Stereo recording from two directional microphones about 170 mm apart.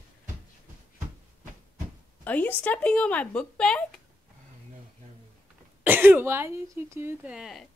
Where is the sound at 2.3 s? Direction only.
10° left (ahead or behind).